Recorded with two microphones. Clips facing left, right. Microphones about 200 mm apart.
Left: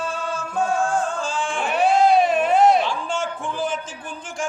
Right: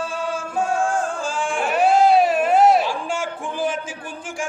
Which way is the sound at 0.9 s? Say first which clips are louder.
Even; 10° right (ahead or behind).